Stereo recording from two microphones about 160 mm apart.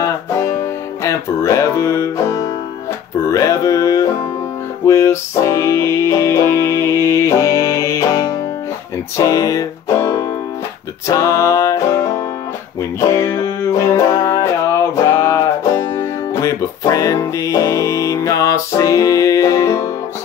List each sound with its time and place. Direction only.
0.0 s music: 20° left (ahead or behind)